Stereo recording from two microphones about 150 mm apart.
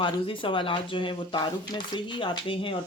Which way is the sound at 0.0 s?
35° left (ahead or behind).